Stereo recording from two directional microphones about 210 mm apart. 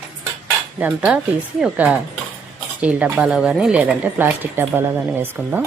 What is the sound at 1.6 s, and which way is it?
A woman's voice, 5° right (ahead or behind).